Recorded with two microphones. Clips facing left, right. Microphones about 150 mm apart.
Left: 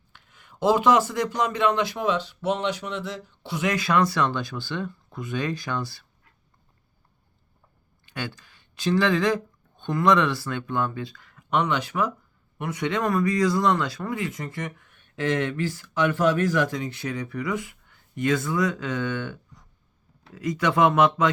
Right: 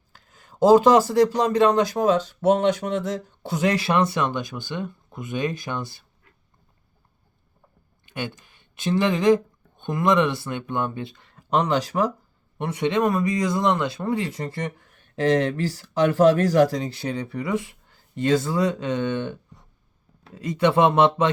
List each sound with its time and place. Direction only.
0.1 s speech: 40° right (ahead or behind); by 6.1 s 20° right (ahead or behind)
8.0 s speech: 20° right (ahead or behind)